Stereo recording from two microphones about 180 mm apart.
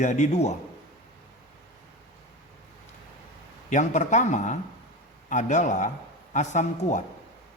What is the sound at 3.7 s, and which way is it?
Speech, 40° left (ahead or behind).